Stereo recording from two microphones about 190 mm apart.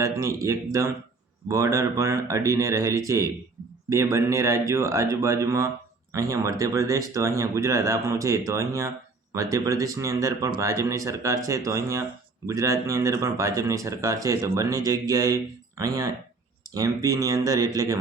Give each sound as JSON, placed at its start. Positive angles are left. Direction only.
{"t": 0.0, "sound": "speech", "side_deg": -15}